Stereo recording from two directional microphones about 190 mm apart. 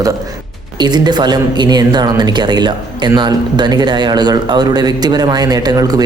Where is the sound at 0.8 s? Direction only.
20° right (ahead or behind).